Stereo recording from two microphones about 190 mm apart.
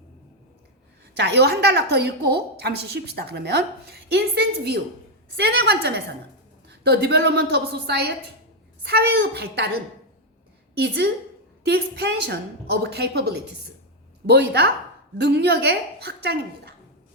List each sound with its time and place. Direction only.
1.1 s a woman's voice: 60° right (ahead or behind)
10.8 s a woman's voice: 60° right (ahead or behind)